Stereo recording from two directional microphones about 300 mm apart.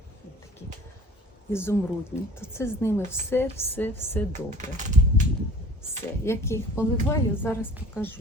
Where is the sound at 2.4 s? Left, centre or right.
Centre.